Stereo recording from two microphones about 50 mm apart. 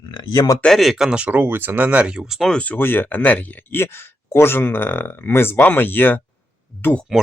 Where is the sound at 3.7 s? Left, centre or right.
Left.